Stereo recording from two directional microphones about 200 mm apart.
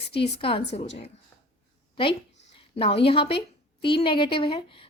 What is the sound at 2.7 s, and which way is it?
A woman's voice, 30° left (ahead or behind).